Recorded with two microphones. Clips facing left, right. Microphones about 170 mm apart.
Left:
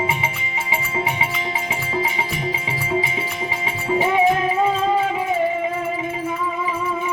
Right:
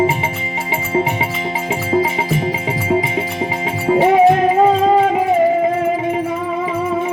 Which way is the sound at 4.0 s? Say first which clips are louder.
Right 7 dB; 60° right (ahead or behind).